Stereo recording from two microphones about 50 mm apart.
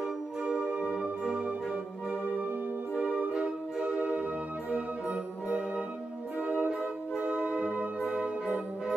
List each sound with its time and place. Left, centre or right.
0.4 s music: right